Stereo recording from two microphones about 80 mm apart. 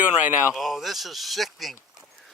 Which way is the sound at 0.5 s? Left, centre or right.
Centre.